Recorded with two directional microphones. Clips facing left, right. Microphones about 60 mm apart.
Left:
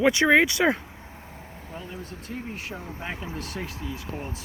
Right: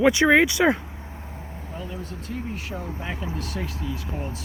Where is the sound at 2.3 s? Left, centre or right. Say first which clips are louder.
Right 3 dB; left.